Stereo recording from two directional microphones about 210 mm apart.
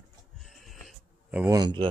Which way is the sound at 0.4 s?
Centre (ahead or behind).